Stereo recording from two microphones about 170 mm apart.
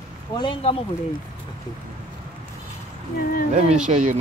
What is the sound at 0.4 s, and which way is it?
Speech, 30° left (ahead or behind).